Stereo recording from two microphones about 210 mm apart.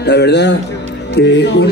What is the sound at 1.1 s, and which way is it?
Music, 55° left (ahead or behind).